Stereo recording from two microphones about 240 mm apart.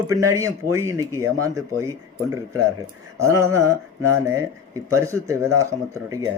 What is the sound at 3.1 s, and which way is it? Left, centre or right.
Speech, centre.